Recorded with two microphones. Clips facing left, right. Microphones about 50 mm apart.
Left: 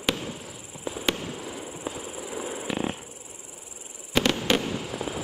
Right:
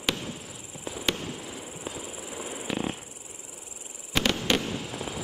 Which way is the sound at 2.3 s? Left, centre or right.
Centre.